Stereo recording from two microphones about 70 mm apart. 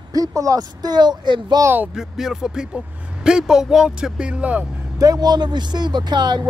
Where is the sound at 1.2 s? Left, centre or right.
Right.